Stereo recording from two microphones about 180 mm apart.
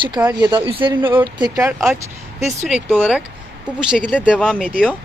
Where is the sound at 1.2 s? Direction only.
25° right (ahead or behind).